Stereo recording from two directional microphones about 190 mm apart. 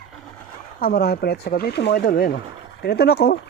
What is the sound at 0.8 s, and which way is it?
Speech, 55° left (ahead or behind).